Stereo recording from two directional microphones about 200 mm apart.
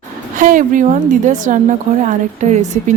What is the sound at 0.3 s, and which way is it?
A woman's voice, 40° right (ahead or behind).